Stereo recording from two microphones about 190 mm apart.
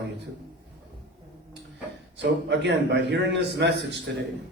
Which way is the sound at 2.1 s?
65° right (ahead or behind).